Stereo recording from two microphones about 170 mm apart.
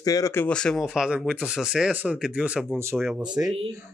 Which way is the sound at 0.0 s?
20° left (ahead or behind).